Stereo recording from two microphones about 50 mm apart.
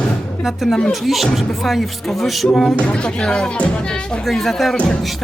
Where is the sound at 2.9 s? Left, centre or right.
Centre.